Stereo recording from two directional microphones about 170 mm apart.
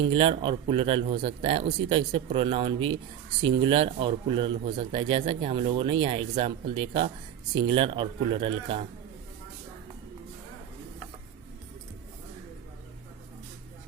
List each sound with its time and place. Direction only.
0.1 s speech: 30° right (ahead or behind)